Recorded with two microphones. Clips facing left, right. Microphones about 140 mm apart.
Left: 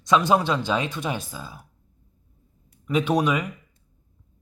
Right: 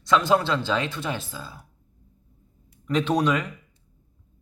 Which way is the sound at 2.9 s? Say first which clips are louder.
Even; 10° left (ahead or behind).